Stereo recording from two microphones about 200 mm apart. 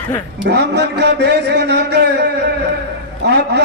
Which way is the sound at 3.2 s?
55° right (ahead or behind).